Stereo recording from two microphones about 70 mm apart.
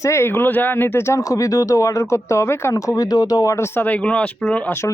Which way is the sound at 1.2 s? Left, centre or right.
Left.